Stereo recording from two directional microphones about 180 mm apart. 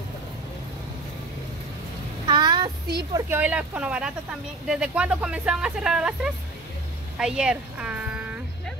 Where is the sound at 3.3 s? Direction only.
10° right (ahead or behind).